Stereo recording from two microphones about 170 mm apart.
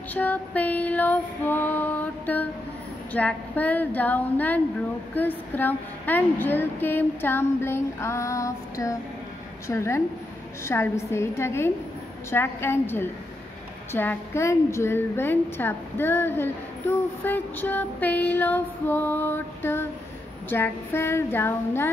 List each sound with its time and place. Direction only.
0.1 s a woman's voice: 10° left (ahead or behind)